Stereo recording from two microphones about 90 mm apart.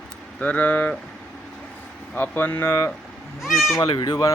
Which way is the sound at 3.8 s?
50° left (ahead or behind).